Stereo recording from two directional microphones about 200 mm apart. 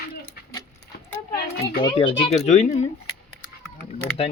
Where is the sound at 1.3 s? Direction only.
50° left (ahead or behind).